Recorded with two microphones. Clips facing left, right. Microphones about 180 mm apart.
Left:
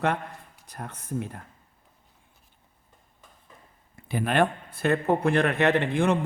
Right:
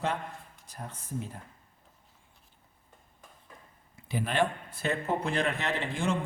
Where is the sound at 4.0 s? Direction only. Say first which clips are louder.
Left 5 dB; 55° left (ahead or behind).